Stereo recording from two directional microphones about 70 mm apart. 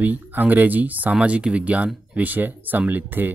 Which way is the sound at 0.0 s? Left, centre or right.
Right.